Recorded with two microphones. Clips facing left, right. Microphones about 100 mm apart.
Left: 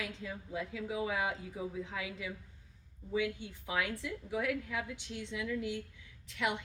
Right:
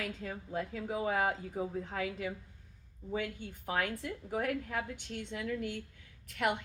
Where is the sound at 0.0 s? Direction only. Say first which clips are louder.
Right 2 dB; 45° right (ahead or behind).